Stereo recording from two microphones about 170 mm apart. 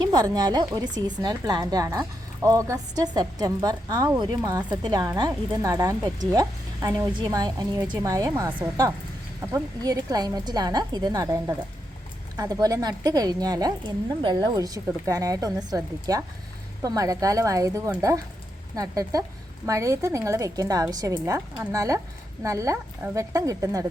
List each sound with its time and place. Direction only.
0.0 s speech: 25° right (ahead or behind)